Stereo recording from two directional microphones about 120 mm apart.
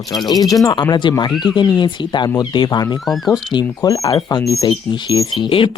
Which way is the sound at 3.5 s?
30° left (ahead or behind).